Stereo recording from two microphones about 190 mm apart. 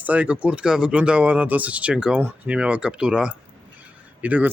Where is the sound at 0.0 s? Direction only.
5° right (ahead or behind).